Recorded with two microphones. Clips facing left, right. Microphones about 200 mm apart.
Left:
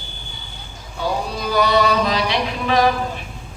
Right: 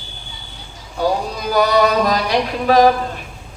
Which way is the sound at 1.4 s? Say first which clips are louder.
Right 2 dB; 45° right (ahead or behind).